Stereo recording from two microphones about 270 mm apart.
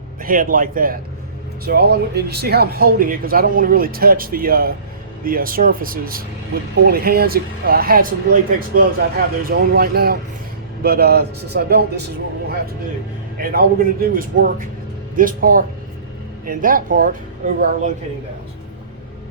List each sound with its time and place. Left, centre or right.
0.2 s speech: right
13.4 s speech: right